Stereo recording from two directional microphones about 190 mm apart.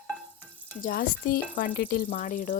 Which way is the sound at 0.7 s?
50° left (ahead or behind).